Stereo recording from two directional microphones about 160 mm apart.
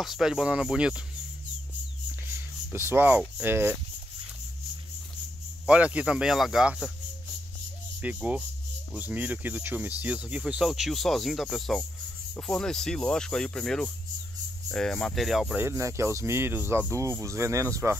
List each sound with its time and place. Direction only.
0.0 s speech: centre (ahead or behind)
2.7 s speech: 15° right (ahead or behind)
5.7 s speech: 5° right (ahead or behind)
8.0 s speech: 10° right (ahead or behind)